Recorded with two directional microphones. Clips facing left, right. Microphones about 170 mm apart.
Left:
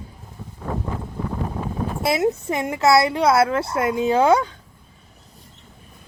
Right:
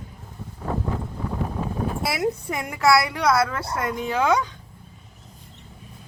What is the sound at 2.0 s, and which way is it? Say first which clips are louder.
Speech: left 8 dB; 25° left (ahead or behind).